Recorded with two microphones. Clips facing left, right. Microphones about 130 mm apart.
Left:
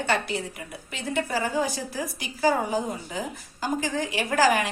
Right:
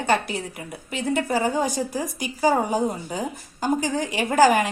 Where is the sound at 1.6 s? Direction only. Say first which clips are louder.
Right 3 dB; 45° right (ahead or behind).